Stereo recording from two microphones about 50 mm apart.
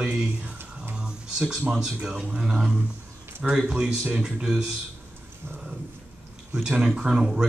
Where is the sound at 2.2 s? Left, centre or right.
Centre.